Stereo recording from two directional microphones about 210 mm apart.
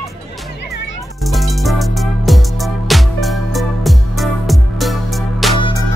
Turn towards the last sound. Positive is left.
turn(degrees=20)  # may be behind; listen again after turning